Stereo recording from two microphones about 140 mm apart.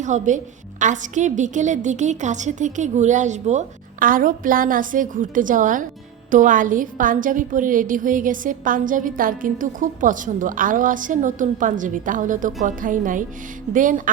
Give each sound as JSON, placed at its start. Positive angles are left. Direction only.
{"t": 0.0, "sound": "a woman's voice", "side_deg": -60}